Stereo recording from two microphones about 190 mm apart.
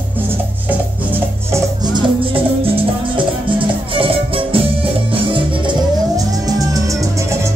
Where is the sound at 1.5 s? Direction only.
20° right (ahead or behind).